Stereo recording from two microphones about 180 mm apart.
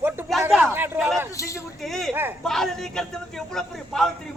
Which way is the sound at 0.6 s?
10° right (ahead or behind).